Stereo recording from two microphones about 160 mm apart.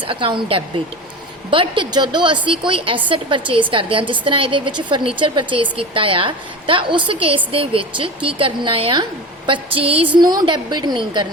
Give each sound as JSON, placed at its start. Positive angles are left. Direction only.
{"t": 0.1, "sound": "a woman's voice", "side_deg": -30}